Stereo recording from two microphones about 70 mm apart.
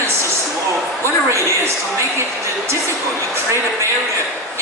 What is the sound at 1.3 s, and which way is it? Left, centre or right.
Speech, right.